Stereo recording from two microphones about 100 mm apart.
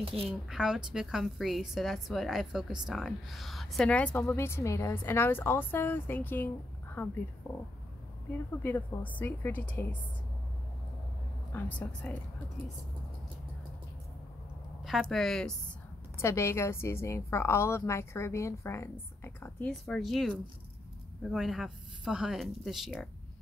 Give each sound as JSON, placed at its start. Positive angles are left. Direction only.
{"t": 0.3, "sound": "a woman's voice", "side_deg": -5}
{"t": 3.9, "sound": "a woman's voice", "side_deg": 15}
{"t": 8.6, "sound": "a woman's voice", "side_deg": 15}
{"t": 11.5, "sound": "a woman's voice", "side_deg": 20}
{"t": 14.8, "sound": "a woman's voice", "side_deg": 0}
{"t": 16.2, "sound": "a woman's voice", "side_deg": 30}
{"t": 19.7, "sound": "a woman's voice", "side_deg": 0}